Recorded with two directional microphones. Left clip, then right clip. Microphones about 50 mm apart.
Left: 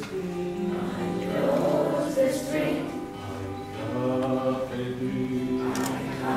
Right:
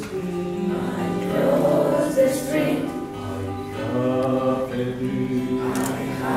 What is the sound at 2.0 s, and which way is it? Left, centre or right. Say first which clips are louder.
Music: right 5 dB; centre.